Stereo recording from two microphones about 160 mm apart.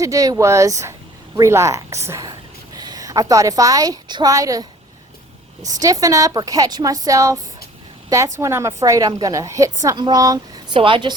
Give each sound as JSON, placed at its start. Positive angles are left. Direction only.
{"t": 0.0, "sound": "a woman's voice", "side_deg": -20}
{"t": 5.6, "sound": "a woman's voice", "side_deg": -20}